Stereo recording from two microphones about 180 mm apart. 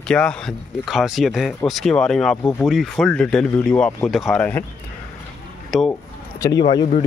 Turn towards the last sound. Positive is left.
turn(degrees=25)  # may be behind; listen again after turning